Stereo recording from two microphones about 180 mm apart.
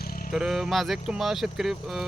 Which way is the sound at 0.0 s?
55° left (ahead or behind).